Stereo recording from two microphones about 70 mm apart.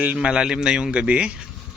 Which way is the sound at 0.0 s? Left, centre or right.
Centre.